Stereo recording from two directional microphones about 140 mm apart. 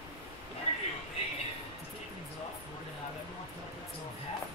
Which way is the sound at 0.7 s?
45° left (ahead or behind).